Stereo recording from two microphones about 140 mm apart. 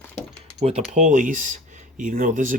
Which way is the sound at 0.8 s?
60° right (ahead or behind).